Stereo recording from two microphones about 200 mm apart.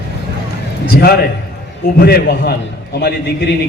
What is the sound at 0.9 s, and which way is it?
A man's voice, 50° left (ahead or behind).